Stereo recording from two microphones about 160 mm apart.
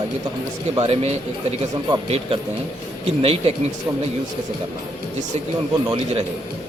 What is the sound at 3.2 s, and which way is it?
Speech, 40° right (ahead or behind).